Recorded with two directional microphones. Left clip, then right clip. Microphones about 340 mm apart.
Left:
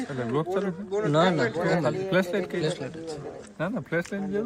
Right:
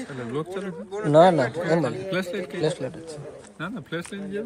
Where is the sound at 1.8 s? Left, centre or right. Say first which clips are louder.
Left 2 dB; centre.